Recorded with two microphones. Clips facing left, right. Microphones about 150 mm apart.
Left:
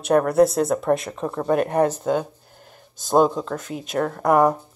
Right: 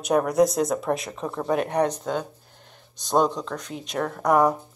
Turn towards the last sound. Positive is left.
turn(degrees=0)  # may be behind; listen again after turning